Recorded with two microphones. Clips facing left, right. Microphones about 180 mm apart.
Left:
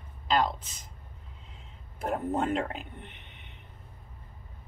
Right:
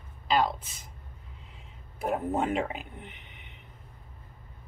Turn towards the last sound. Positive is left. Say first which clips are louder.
# right 1 dB
turn(degrees=-5)  # may be behind; listen again after turning